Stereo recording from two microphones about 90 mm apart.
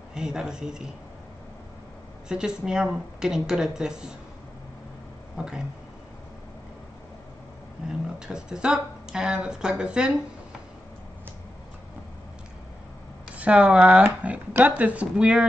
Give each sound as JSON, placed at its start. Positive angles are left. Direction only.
{"t": 0.1, "sound": "speech", "side_deg": -10}
{"t": 2.2, "sound": "speech", "side_deg": -10}
{"t": 5.4, "sound": "speech", "side_deg": -10}
{"t": 8.3, "sound": "speech", "side_deg": -10}
{"t": 13.4, "sound": "speech", "side_deg": -15}